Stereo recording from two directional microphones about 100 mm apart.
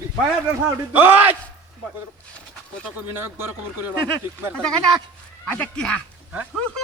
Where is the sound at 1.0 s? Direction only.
20° right (ahead or behind).